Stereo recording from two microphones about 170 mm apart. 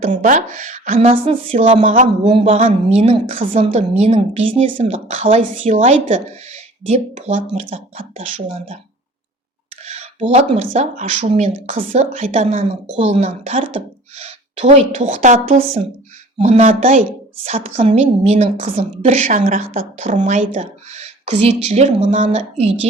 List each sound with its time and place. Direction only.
0.0 s a woman's voice: 50° right (ahead or behind)
9.8 s a woman's voice: 40° right (ahead or behind)
15.5 s a woman's voice: 35° right (ahead or behind)